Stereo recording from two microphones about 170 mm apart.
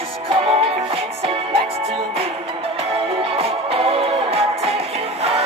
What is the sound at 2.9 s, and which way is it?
Music, 35° right (ahead or behind).